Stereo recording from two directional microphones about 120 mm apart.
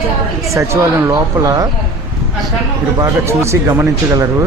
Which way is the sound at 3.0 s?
25° right (ahead or behind).